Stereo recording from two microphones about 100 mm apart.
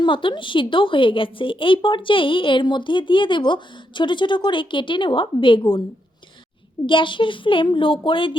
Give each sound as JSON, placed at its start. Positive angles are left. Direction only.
{"t": 0.0, "sound": "a woman's voice", "side_deg": 55}
{"t": 6.8, "sound": "a woman's voice", "side_deg": 55}